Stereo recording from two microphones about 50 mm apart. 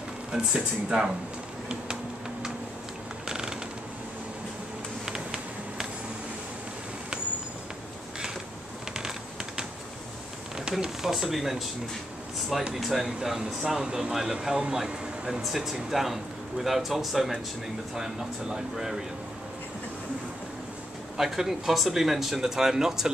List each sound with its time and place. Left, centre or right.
0.6 s speech: centre
3.3 s mechanisms: centre
5.0 s a sound: centre
8.9 s typing: centre
10.8 s speech: centre
12.4 s air conditioning: centre
12.7 s speech: centre
21.2 s speech: centre